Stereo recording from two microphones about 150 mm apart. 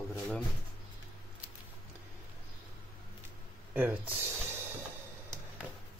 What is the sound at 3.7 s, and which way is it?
Speech, 10° right (ahead or behind).